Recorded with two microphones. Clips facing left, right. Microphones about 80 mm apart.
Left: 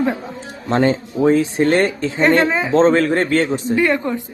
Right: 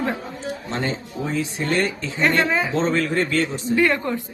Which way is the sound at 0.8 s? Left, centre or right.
Left.